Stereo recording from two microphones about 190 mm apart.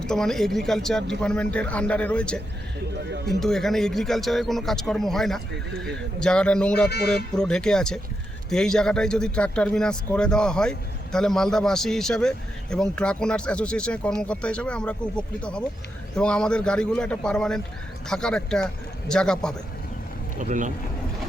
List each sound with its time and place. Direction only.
0.0 s a man's voice: 5° left (ahead or behind)
20.4 s speech: 40° right (ahead or behind)